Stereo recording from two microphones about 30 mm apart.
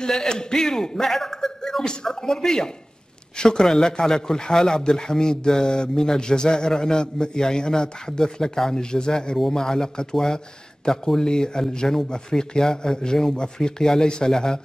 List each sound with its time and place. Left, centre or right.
0.0 s a man's voice: left
1.6 s a sound: centre
2.0 s a man's voice: centre
11.2 s a man's voice: left